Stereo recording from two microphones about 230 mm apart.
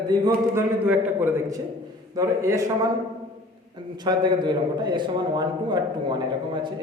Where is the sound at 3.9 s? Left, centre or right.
Centre.